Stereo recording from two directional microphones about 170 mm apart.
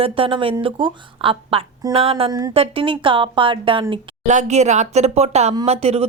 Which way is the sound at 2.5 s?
35° right (ahead or behind).